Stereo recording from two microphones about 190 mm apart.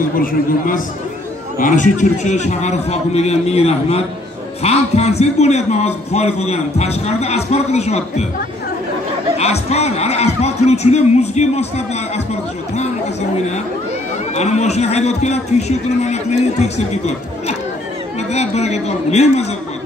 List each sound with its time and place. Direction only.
0.2 s a man's voice: 45° left (ahead or behind)
9.4 s a man's voice: 35° left (ahead or behind)
14.3 s a man's voice: 35° left (ahead or behind)
18.3 s a man's voice: 35° left (ahead or behind)